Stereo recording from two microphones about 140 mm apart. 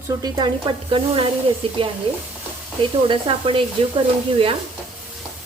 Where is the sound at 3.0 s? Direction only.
40° right (ahead or behind).